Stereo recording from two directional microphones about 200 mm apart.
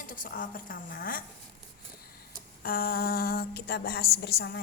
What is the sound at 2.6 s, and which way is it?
A woman's voice, 45° left (ahead or behind).